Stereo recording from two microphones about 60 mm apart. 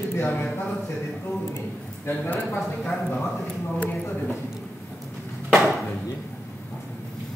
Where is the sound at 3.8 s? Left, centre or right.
Left.